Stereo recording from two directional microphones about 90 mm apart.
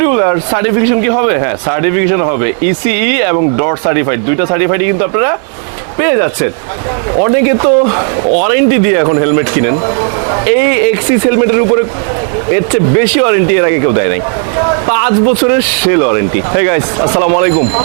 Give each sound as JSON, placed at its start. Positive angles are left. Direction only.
{"t": 0.0, "sound": "speech", "side_deg": -20}
{"t": 8.3, "sound": "speech", "side_deg": -15}
{"t": 15.3, "sound": "speech", "side_deg": -20}
{"t": 17.5, "sound": "speech", "side_deg": -35}